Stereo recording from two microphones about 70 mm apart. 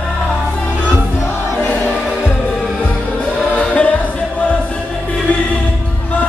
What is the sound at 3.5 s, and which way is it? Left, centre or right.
Music, centre.